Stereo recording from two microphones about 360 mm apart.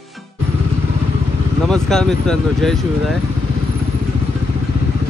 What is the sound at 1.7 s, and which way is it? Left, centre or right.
Speech, centre.